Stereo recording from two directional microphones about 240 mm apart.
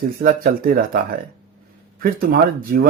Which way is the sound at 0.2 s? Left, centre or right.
Right.